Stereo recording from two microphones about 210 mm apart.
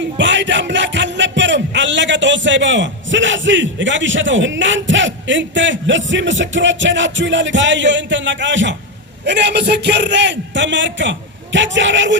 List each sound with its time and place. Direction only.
0.2 s music: 60° right (ahead or behind)
6.1 s a man's voice: 60° right (ahead or behind)